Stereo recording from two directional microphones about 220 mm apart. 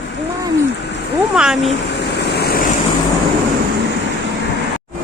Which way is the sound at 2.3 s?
45° left (ahead or behind).